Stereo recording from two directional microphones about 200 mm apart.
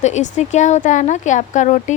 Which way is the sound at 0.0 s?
35° left (ahead or behind).